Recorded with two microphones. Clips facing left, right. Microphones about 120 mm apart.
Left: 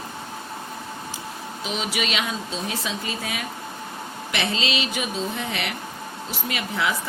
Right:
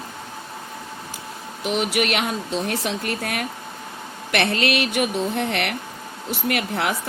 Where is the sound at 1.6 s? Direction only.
70° right (ahead or behind).